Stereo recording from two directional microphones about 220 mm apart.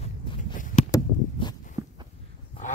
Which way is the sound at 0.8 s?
15° left (ahead or behind).